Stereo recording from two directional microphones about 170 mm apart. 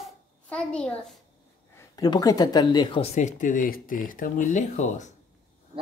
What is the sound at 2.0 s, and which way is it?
Speech, 20° left (ahead or behind).